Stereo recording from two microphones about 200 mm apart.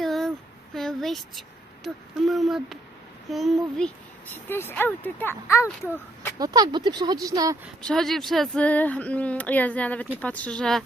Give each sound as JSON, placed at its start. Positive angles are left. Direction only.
{"t": 0.0, "sound": "a sound", "side_deg": 0}
{"t": 3.2, "sound": "a child's voice", "side_deg": 0}
{"t": 6.4, "sound": "speech", "side_deg": -20}
{"t": 7.8, "sound": "speech", "side_deg": 5}